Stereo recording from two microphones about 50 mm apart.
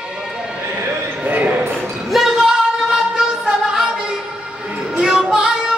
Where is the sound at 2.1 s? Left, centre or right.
Centre.